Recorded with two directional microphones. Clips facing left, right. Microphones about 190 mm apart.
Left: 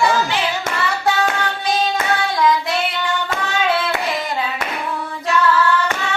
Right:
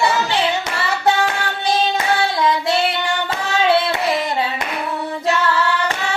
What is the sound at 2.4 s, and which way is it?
Female singing, 30° right (ahead or behind).